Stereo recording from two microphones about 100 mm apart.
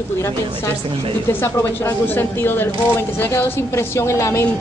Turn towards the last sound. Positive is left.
turn(degrees=30)  # may be behind; listen again after turning